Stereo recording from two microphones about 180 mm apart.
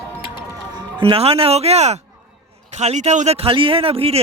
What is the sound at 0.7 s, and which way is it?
Speech, 25° right (ahead or behind).